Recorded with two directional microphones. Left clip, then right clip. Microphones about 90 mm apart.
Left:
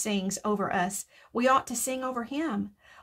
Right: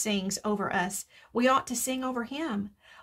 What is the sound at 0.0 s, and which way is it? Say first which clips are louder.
A woman's voice: even; 30° left (ahead or behind).